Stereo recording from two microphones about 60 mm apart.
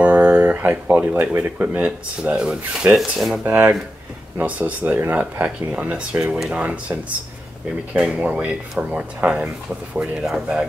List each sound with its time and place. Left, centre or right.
0.0 s speech: right
2.3 s speech: centre
3.0 s speech: centre
3.4 s speech: right
5.7 s speech: right